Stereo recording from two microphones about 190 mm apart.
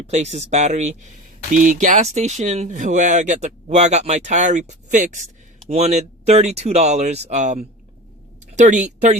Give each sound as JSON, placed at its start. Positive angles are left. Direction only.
{"t": 0.0, "sound": "speech", "side_deg": -35}